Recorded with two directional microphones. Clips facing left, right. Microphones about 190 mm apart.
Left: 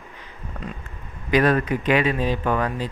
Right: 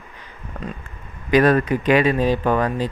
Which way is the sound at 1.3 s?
45° right (ahead or behind).